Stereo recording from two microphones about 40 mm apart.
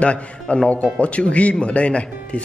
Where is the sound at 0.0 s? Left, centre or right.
Left.